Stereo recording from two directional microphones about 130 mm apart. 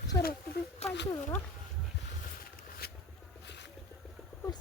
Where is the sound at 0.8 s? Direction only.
55° left (ahead or behind).